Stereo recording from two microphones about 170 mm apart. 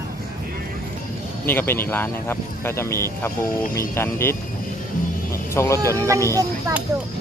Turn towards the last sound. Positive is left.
turn(degrees=-20)  # may be behind; listen again after turning